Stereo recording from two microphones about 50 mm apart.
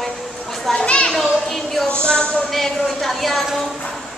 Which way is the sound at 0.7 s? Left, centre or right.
Centre.